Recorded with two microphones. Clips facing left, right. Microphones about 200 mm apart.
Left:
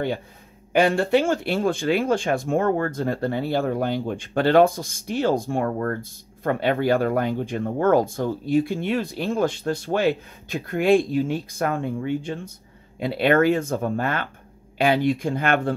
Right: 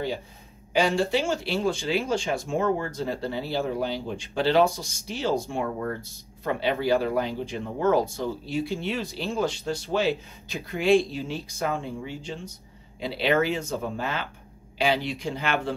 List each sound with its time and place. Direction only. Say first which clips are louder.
0.7 s speech: left 5 dB; 55° left (ahead or behind)